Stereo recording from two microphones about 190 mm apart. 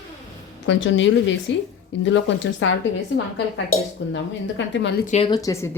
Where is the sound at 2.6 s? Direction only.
85° left.